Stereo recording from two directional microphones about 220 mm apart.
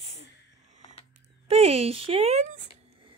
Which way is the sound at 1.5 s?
25° right (ahead or behind).